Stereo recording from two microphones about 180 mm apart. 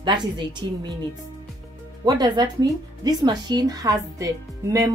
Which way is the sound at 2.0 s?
20° right (ahead or behind).